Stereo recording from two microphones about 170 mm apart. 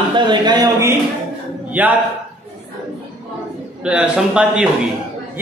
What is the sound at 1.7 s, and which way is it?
Speech, 10° right (ahead or behind).